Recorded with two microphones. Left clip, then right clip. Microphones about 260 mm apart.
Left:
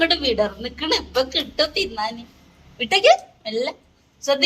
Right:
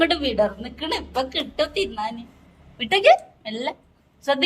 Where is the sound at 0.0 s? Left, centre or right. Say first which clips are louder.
Left 1 dB; centre.